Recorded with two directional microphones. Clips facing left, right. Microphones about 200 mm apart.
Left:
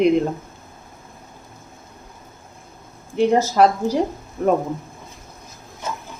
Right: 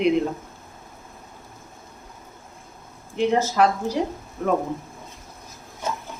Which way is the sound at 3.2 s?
40° left (ahead or behind).